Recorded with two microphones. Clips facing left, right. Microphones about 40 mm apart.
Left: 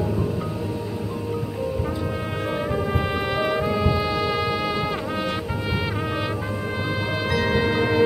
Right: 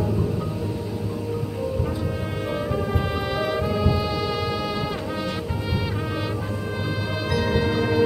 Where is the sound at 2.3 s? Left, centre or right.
Centre.